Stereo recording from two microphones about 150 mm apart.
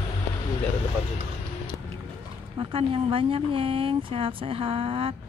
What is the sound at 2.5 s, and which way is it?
Speech, 40° right (ahead or behind).